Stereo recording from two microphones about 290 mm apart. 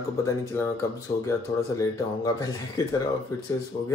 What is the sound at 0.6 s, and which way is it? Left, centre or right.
Speech, centre.